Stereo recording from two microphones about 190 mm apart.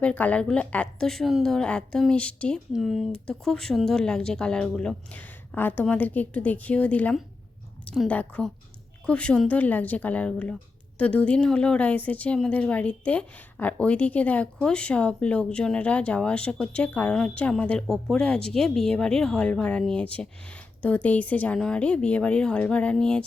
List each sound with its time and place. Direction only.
0.0 s speech: 5° left (ahead or behind)